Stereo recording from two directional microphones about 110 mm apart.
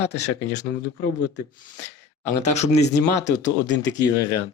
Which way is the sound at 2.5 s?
85° left.